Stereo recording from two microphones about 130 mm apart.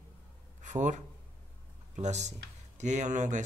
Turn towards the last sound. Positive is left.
turn(degrees=-70)  # may be behind; listen again after turning